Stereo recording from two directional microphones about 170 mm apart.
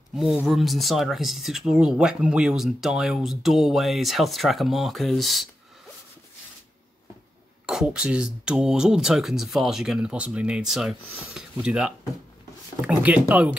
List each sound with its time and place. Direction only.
0.1 s speech: centre (ahead or behind)
7.6 s speech: 5° right (ahead or behind)